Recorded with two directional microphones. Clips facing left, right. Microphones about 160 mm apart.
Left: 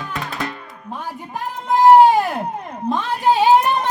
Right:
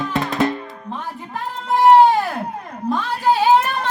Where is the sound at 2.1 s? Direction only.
20° left (ahead or behind).